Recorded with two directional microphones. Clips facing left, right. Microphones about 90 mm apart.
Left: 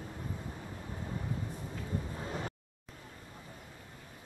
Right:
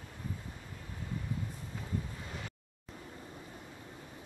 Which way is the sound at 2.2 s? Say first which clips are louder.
Left 6 dB; 35° left (ahead or behind).